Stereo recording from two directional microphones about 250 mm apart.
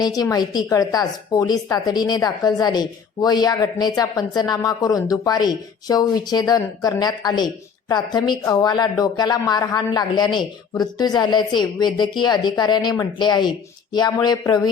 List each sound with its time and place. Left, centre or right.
0.0 s speech: centre